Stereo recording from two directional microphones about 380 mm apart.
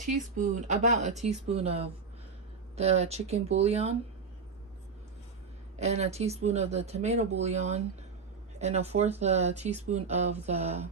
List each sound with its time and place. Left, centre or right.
0.0 s speech: centre
5.8 s speech: centre